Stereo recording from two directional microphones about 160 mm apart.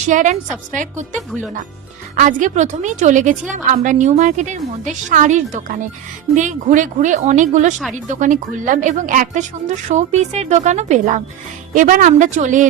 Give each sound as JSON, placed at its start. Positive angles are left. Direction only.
{"t": 0.1, "sound": "a woman's voice", "side_deg": -50}